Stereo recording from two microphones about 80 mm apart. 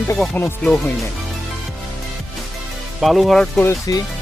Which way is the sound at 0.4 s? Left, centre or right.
Left.